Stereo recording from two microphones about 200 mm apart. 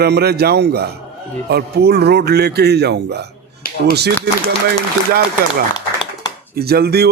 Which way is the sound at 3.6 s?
45° left (ahead or behind).